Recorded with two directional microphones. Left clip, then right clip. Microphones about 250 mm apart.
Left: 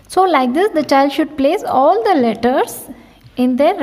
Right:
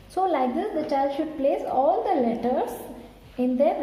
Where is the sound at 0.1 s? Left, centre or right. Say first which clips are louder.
Left 11 dB; left.